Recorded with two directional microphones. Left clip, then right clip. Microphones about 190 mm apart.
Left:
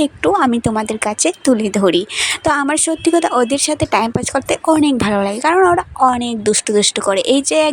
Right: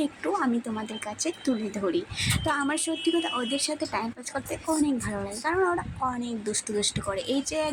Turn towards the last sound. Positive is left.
turn(degrees=45)  # may be behind; listen again after turning